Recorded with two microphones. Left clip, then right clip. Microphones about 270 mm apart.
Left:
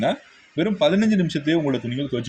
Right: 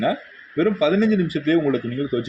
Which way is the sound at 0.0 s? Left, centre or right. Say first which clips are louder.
Right 1 dB; left.